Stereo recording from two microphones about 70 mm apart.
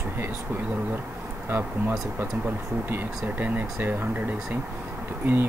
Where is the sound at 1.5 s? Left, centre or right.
Right.